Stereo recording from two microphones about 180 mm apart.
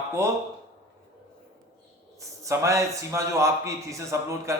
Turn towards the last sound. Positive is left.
turn(degrees=-15)  # may be behind; listen again after turning